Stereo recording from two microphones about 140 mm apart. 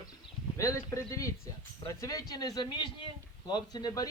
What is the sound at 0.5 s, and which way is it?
A man's voice, 20° left (ahead or behind).